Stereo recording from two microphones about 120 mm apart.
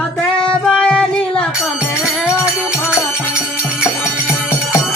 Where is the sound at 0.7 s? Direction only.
10° left (ahead or behind).